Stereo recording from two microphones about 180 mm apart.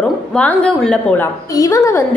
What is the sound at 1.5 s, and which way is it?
Speech, 20° left (ahead or behind).